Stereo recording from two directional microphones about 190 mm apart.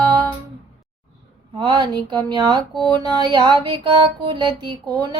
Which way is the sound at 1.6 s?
25° right (ahead or behind).